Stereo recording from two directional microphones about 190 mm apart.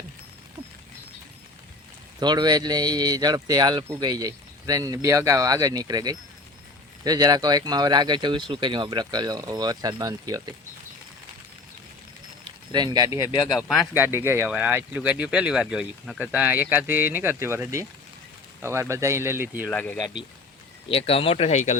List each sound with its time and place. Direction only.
2.1 s speech: 20° right (ahead or behind)
12.7 s speech: 20° right (ahead or behind)
13.4 s speech: centre (ahead or behind)
19.7 s speech: 10° left (ahead or behind)
20.8 s speech: 30° left (ahead or behind)